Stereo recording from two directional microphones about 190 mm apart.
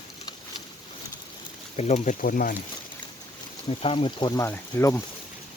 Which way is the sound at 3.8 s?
30° left (ahead or behind).